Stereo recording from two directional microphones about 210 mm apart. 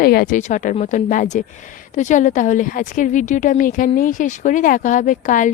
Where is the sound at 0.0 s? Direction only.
45° left (ahead or behind).